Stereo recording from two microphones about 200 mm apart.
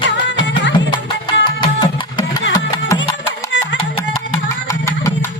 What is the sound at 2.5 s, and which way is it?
Music, 20° left (ahead or behind).